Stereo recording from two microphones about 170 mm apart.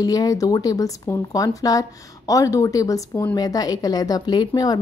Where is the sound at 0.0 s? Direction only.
20° left (ahead or behind).